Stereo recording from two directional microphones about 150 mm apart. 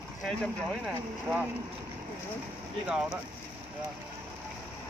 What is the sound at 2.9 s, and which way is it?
Speech, 5° right (ahead or behind).